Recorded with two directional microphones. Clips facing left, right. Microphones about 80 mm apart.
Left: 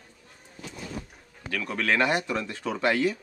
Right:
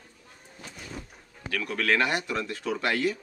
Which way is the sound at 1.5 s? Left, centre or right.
Centre.